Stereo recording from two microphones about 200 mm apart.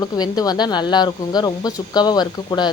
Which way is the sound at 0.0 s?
20° left (ahead or behind).